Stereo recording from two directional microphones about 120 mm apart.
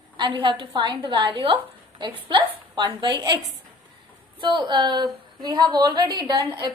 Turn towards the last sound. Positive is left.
turn(degrees=-40)  # may be behind; listen again after turning